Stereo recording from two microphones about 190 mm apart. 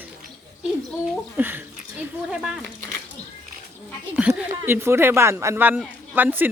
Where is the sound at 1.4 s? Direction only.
10° right (ahead or behind).